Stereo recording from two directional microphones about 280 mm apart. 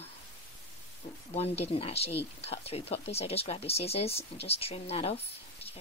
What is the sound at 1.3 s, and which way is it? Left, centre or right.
Speech, left.